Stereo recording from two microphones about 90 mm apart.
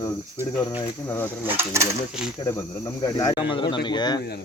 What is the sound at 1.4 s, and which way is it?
Speech, 30° right (ahead or behind).